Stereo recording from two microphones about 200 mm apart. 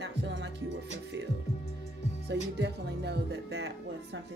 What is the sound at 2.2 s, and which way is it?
Speech, 60° right (ahead or behind).